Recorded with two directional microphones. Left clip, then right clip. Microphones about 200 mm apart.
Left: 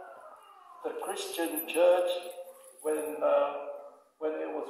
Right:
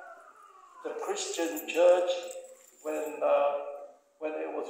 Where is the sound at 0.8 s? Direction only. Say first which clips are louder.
Right 1 dB; 40° left (ahead or behind).